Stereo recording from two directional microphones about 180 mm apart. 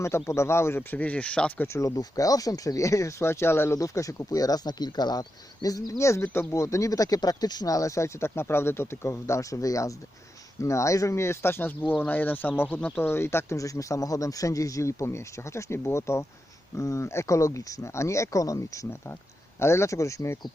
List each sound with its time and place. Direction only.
0.0 s speech: 15° left (ahead or behind)